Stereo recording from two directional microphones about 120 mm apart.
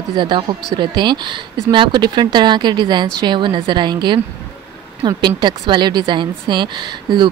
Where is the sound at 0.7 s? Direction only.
40° right (ahead or behind).